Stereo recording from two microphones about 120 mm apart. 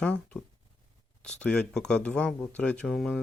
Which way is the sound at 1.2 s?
5° left (ahead or behind).